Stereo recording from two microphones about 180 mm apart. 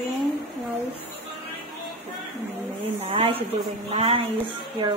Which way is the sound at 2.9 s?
30° right (ahead or behind).